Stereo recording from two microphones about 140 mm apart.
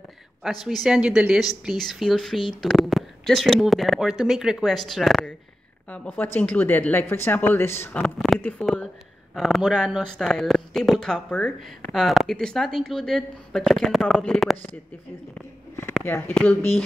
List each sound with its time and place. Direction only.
0.4 s speech: centre (ahead or behind)
5.9 s a woman's voice: 15° left (ahead or behind)
7.9 s a woman's voice: 5° left (ahead or behind)
16.0 s a woman's voice: 10° left (ahead or behind)